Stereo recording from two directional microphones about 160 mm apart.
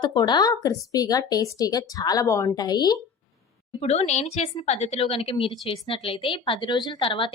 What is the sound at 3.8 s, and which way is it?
A woman's voice, 40° left (ahead or behind).